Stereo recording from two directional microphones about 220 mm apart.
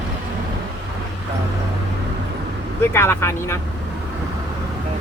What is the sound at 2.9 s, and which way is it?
Speech, 10° left (ahead or behind).